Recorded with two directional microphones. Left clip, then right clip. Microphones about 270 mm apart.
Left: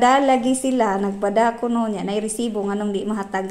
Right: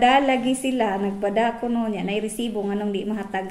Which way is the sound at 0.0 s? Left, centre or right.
Centre.